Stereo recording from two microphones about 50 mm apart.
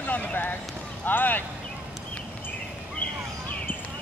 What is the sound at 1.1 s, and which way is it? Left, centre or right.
Clip-clop, left.